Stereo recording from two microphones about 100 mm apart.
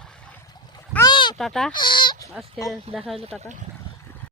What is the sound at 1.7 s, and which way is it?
Speech, 50° left (ahead or behind).